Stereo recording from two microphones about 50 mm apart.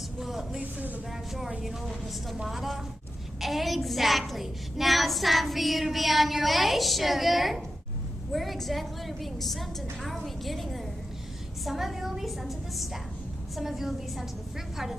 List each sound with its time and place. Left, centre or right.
0.2 s a sound: centre
0.6 s speech: right
2.4 s a woman's voice: centre